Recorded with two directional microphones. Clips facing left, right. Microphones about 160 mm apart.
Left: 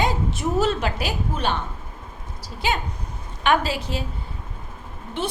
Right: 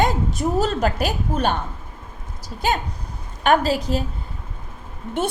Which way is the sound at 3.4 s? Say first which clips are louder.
Right 3 dB; 40° right (ahead or behind).